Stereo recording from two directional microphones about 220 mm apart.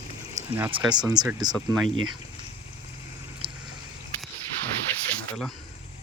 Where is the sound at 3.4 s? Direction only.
25° right (ahead or behind).